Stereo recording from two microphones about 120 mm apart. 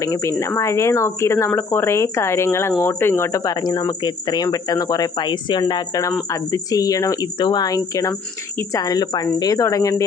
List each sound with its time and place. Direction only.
0.0 s speech: 25° left (ahead or behind)